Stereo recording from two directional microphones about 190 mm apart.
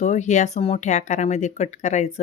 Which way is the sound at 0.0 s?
35° left (ahead or behind).